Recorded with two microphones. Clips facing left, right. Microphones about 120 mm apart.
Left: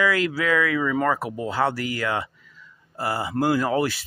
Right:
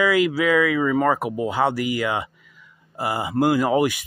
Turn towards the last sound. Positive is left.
turn(degrees=-15)  # may be behind; listen again after turning